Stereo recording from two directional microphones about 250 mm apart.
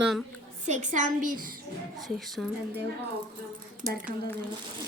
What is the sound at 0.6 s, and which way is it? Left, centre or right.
Speech, right.